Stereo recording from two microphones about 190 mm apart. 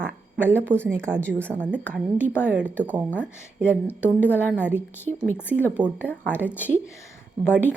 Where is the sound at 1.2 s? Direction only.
5° left (ahead or behind).